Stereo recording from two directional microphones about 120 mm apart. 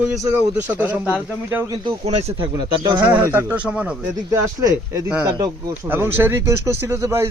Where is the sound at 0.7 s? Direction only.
15° right (ahead or behind).